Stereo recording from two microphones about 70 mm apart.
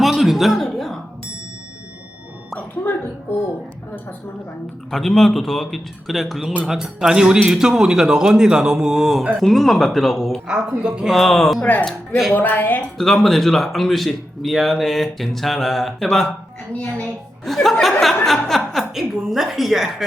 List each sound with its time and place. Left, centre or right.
0.0 s a sound: centre
2.6 s a sound: left
4.9 s speech: centre
10.5 s speech: centre
11.1 s speech: centre
11.6 s speech: left
13.0 s speech: centre
16.7 s a child's voice: centre
17.4 s speech: centre